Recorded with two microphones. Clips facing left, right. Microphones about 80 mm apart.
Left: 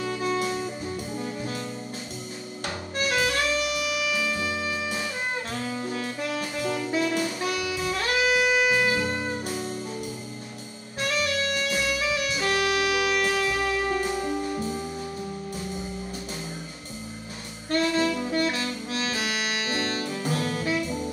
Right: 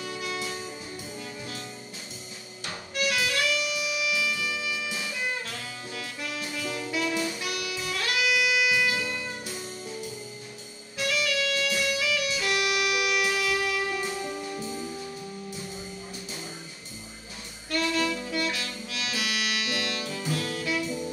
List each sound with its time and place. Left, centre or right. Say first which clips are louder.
0.0 s music: left 7 dB; left
1.1 s jazz: left 7 dB; left
2.6 s music: left 1 dB; left
6.9 s saxophone: left 2 dB; left
7.3 s music: left 5 dB; left
11.0 s music: left 1 dB; left
17.6 s saxophone: left 4 dB; left